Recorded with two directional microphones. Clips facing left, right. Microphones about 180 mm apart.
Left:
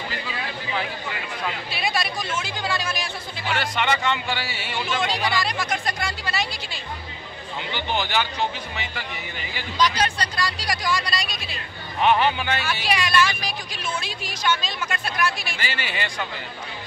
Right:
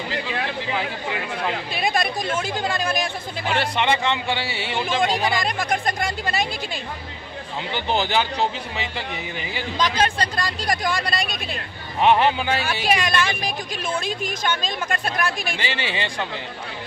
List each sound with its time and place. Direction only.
1.5 s speech: 45° right (ahead or behind)
3.4 s speech: 30° right (ahead or behind)
5.0 s speech: 50° right (ahead or behind)
7.7 s a man's voice: 35° right (ahead or behind)
9.8 s speech: 50° right (ahead or behind)
12.0 s a man's voice: 30° right (ahead or behind)
12.8 s speech: 50° right (ahead or behind)
15.6 s speech: 25° right (ahead or behind)